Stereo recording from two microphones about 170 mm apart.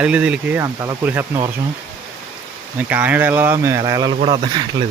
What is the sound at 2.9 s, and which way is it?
Speech, 10° right (ahead or behind).